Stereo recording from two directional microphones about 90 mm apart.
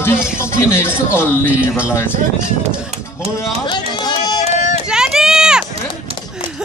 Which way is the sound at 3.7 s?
50° left (ahead or behind).